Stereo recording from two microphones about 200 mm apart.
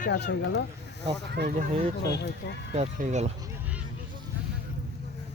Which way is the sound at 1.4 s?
60° right (ahead or behind).